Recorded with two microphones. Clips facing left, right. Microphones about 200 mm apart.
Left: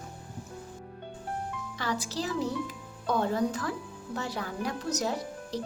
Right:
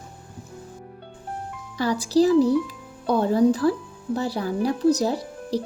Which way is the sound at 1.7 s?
35° right (ahead or behind).